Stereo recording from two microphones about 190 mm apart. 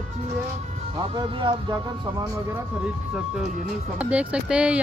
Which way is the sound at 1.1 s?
25° right (ahead or behind).